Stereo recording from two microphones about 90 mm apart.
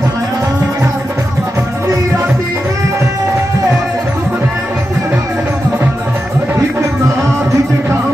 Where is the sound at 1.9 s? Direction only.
35° right (ahead or behind).